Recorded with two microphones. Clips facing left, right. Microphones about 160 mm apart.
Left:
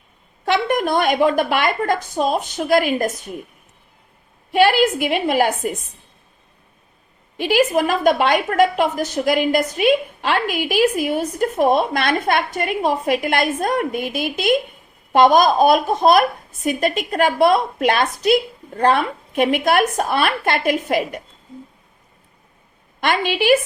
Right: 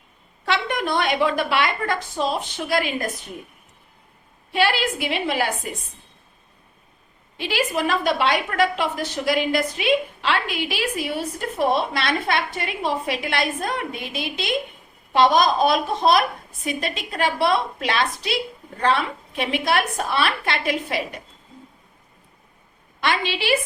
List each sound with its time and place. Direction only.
0.4 s a woman's voice: 45° left (ahead or behind)
4.5 s a woman's voice: 50° left (ahead or behind)
7.3 s a woman's voice: 50° left (ahead or behind)
23.0 s a woman's voice: 50° left (ahead or behind)